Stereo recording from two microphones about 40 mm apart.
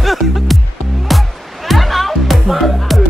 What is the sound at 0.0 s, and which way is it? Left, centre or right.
Music, centre.